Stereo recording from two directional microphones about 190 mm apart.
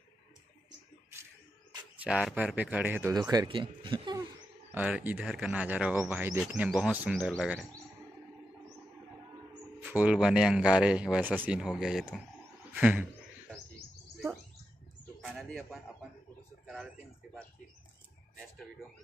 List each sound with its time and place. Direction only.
2.0 s speech: 5° right (ahead or behind)
3.2 s speech: 20° right (ahead or behind)
4.6 s speech: 10° right (ahead or behind)
9.8 s speech: 10° right (ahead or behind)
15.2 s bird: centre (ahead or behind)
16.6 s speech: centre (ahead or behind)